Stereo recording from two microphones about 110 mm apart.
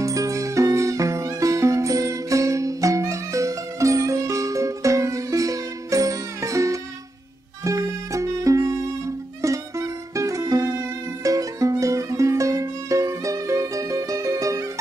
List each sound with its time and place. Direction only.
0.0 s music: 30° right (ahead or behind)